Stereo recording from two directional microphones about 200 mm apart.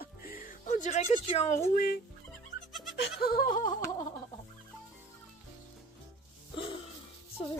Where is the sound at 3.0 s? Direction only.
50° left (ahead or behind).